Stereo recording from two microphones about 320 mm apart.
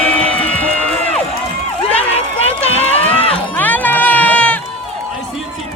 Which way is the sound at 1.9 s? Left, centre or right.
Centre.